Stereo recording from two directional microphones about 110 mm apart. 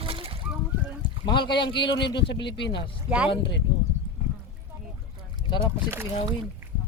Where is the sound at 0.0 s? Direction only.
55° right (ahead or behind).